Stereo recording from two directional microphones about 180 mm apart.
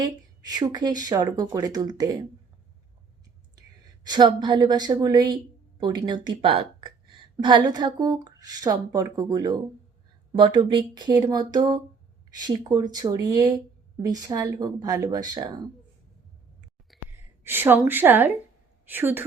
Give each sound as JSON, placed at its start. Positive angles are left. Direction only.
{"t": 0.0, "sound": "a woman's voice", "side_deg": -20}
{"t": 4.0, "sound": "a woman's voice", "side_deg": -25}
{"t": 16.9, "sound": "sigh", "side_deg": 0}
{"t": 17.4, "sound": "a woman's voice", "side_deg": -10}